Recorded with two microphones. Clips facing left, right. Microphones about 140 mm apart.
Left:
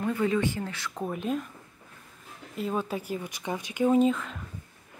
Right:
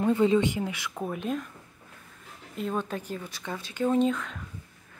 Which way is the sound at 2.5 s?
5° left (ahead or behind).